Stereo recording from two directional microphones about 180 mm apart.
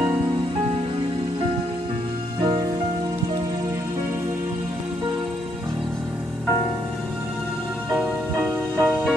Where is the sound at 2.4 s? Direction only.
25° right (ahead or behind).